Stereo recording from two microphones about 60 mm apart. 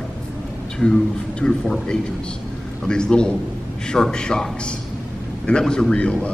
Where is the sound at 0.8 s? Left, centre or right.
Centre.